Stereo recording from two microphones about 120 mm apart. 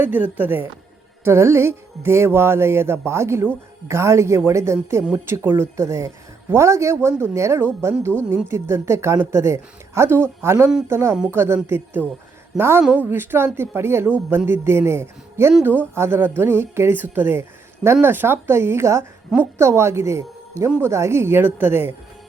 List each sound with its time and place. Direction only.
0.0 s a woman's voice: 15° right (ahead or behind)